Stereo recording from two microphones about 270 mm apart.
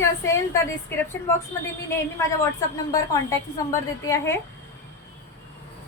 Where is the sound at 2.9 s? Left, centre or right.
Centre.